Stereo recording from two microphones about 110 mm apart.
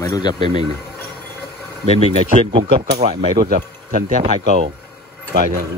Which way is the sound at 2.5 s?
60° right (ahead or behind).